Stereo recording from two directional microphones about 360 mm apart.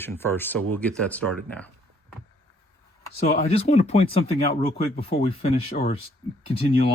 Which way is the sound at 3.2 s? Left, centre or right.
Centre.